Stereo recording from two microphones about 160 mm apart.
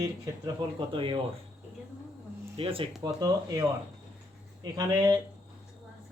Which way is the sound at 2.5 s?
35° right (ahead or behind).